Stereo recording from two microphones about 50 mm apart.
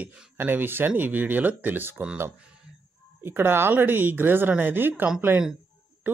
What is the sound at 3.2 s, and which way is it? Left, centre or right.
Speech, right.